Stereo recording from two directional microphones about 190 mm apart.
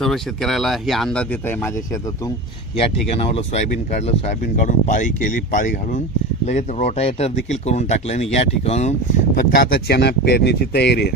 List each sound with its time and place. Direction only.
0.0 s speech: centre (ahead or behind)
2.8 s speech: 35° left (ahead or behind); by 11.1 s 60° left (ahead or behind)